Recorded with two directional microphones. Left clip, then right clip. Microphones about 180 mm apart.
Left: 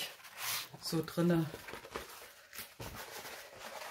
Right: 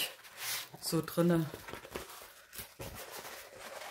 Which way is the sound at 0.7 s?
40° right (ahead or behind).